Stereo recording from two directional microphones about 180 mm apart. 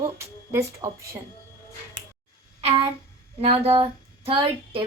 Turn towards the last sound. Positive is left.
turn(degrees=-30)  # may be behind; listen again after turning